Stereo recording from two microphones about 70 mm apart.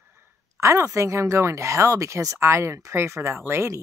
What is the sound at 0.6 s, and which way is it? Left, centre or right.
Speech, right.